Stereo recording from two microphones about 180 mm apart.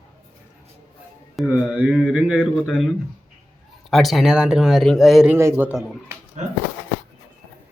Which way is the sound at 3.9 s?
Centre (ahead or behind).